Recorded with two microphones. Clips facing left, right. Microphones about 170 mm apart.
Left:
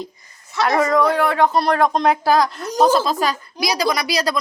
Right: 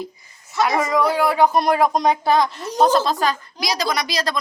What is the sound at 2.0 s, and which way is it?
A woman's voice, centre (ahead or behind).